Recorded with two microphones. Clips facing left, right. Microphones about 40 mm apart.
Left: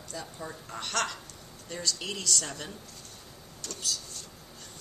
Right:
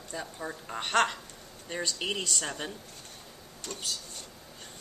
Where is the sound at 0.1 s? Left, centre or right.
Right.